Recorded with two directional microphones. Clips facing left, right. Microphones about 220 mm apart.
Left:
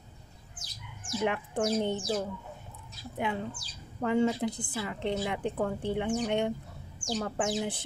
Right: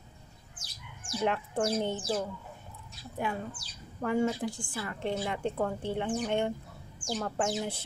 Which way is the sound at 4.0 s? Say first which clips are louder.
Left 2 dB; 20° left (ahead or behind).